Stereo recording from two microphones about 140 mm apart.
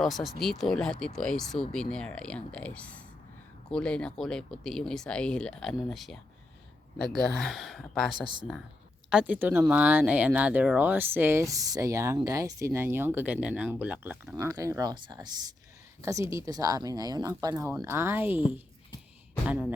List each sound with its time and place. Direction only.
0.0 s speech: centre (ahead or behind)
9.0 s speech: 10° right (ahead or behind)
14.3 s speech: 20° right (ahead or behind)
16.0 s speech: 20° right (ahead or behind)